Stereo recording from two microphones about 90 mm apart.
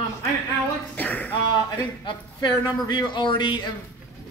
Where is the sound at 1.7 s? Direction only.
60° left (ahead or behind).